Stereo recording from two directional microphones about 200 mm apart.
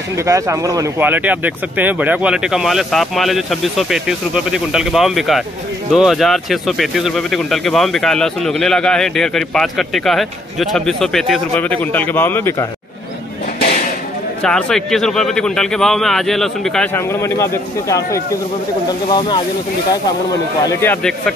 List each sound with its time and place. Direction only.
0.2 s speech: 15° right (ahead or behind); by 12.6 s 10° left (ahead or behind)
14.4 s speech: 5° left (ahead or behind); by 19.4 s 20° left (ahead or behind)
20.8 s speech: 10° left (ahead or behind)